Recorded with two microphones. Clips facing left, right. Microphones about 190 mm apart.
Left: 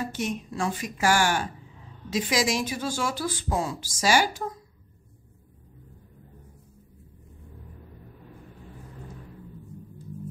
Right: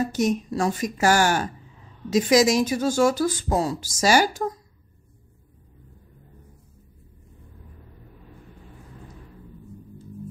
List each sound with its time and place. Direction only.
0.0 s a woman's voice: 40° right (ahead or behind)